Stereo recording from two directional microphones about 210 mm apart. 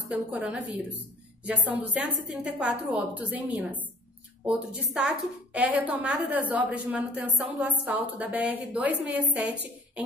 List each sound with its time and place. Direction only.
0.3 s a woman's voice: 5° right (ahead or behind)